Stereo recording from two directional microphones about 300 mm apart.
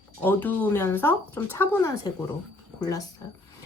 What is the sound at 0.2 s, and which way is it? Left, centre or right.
Speech, centre.